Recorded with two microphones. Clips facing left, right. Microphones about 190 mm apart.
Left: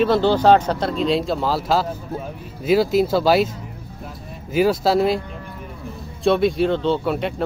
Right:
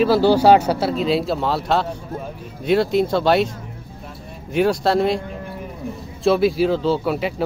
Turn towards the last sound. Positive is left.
turn(degrees=-5)  # may be behind; listen again after turning